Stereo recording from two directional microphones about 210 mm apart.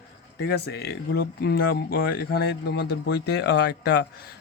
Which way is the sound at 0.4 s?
50° left (ahead or behind).